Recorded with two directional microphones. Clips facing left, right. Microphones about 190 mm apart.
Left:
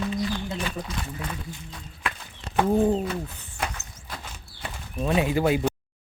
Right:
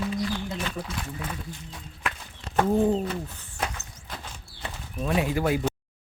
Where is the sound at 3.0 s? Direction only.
15° left (ahead or behind).